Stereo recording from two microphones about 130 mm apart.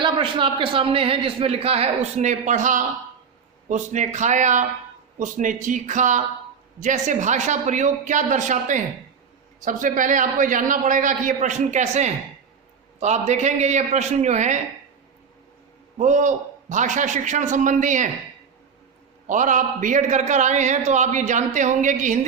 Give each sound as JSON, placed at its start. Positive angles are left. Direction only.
{"t": 0.0, "sound": "a man's voice", "side_deg": -40}
{"t": 3.7, "sound": "a man's voice", "side_deg": -70}
{"t": 5.2, "sound": "a man's voice", "side_deg": -85}
{"t": 9.6, "sound": "a man's voice", "side_deg": -90}
{"t": 16.0, "sound": "a man's voice", "side_deg": -70}
{"t": 19.3, "sound": "a man's voice", "side_deg": -80}